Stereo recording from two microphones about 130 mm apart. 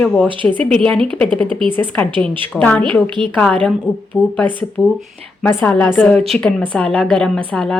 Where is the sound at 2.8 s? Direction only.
40° right (ahead or behind).